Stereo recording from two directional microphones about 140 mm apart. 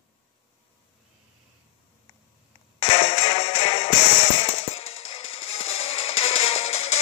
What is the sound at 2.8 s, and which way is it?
Music, 45° left (ahead or behind).